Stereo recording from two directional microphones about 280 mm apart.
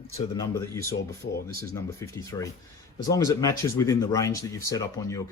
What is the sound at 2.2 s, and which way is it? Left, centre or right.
Speech, centre.